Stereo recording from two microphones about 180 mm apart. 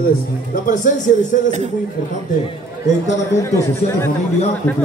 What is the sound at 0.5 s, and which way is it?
Speech, 45° left (ahead or behind).